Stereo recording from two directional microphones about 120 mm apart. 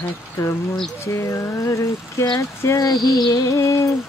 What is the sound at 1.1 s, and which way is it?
Speech, 25° left (ahead or behind).